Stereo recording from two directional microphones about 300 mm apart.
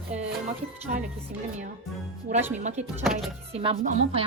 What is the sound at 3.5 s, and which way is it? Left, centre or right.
Speech, centre.